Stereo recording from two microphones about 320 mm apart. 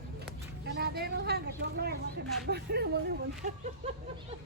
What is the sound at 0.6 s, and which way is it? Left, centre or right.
Speech, right.